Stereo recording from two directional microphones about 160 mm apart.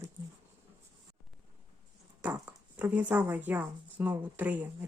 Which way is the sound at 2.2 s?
10° right (ahead or behind).